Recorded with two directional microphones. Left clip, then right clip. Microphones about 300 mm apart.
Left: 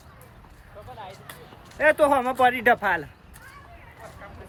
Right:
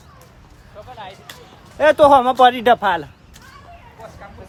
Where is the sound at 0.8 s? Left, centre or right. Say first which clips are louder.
Right 6 dB; right.